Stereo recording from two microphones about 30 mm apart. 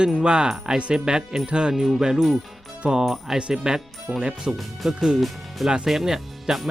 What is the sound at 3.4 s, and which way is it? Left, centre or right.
Speech, right.